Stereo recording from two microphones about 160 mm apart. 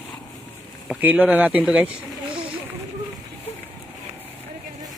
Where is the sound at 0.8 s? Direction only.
10° right (ahead or behind).